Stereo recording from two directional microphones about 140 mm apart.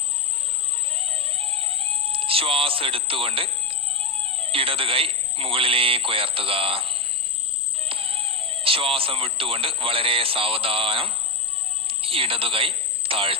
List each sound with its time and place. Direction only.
0.9 s music: 40° right (ahead or behind)
7.8 s speech: 40° right (ahead or behind)